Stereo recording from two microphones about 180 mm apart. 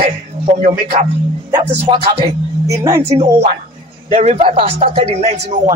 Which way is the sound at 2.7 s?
15° right (ahead or behind).